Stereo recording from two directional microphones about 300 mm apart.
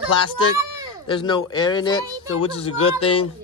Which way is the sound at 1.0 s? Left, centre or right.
Centre.